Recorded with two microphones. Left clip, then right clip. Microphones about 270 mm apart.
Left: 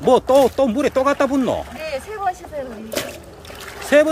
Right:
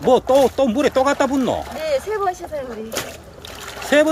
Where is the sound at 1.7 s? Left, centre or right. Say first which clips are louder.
Right 6 dB; right.